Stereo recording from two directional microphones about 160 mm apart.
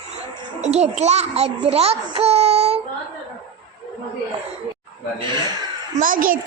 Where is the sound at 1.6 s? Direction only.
40° right (ahead or behind).